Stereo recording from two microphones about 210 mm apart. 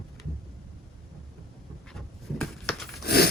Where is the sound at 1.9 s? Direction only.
Centre (ahead or behind).